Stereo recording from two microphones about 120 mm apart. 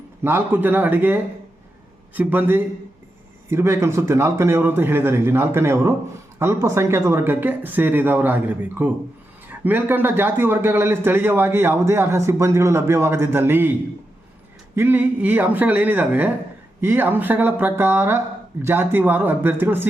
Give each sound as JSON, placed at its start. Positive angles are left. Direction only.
{"t": 0.2, "sound": "a man's voice", "side_deg": -15}
{"t": 14.8, "sound": "speech", "side_deg": -15}